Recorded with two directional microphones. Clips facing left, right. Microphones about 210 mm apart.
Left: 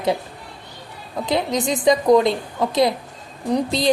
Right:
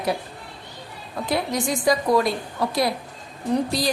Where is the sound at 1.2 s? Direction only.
20° left (ahead or behind).